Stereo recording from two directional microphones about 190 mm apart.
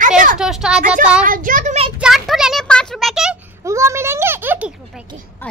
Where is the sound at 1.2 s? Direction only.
45° right (ahead or behind).